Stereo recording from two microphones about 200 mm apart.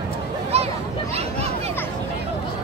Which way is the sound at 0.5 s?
30° right (ahead or behind).